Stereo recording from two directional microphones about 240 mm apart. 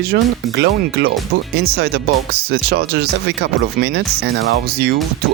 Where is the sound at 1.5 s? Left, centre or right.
Right.